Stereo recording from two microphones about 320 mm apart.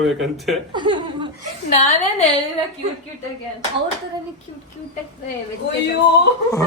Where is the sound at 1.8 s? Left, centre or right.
Centre.